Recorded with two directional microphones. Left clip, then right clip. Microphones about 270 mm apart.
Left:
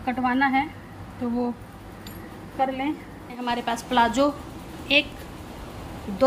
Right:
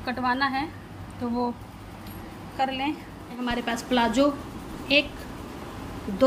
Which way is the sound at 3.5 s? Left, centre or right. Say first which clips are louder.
Left 1 dB; centre.